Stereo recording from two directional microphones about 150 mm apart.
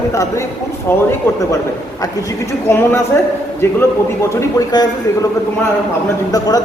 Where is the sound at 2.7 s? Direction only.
15° left (ahead or behind).